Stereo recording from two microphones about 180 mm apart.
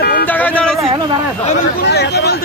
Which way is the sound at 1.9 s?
65° left (ahead or behind).